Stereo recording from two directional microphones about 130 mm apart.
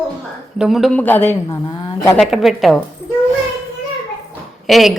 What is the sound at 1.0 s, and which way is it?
Speech, 15° left (ahead or behind).